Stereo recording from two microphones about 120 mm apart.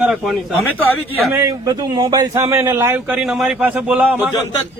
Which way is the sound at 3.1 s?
Centre (ahead or behind).